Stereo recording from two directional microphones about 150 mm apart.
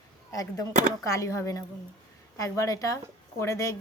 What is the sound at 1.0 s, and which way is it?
Speech, 20° left (ahead or behind).